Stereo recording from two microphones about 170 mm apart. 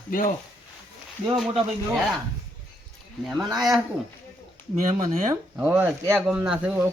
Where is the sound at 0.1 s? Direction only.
55° left (ahead or behind).